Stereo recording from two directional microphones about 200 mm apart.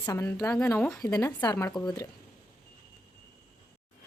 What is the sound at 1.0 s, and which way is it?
A woman's voice, 15° left (ahead or behind).